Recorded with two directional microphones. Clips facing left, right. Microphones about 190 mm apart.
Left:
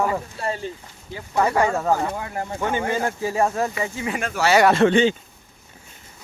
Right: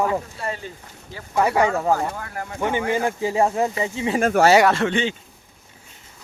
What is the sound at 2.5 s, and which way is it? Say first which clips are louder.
Speech: right 2 dB; 15° right (ahead or behind).